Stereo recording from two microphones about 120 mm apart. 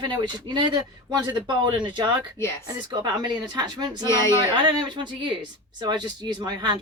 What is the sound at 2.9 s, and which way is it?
Speech, 35° right (ahead or behind).